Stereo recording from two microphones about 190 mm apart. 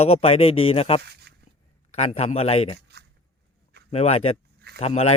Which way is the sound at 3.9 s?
35° left (ahead or behind).